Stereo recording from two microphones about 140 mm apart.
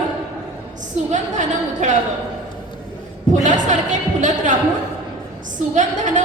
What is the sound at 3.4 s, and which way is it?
Speech, 60° right (ahead or behind).